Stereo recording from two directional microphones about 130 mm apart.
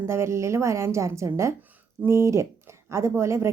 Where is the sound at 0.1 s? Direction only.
20° right (ahead or behind).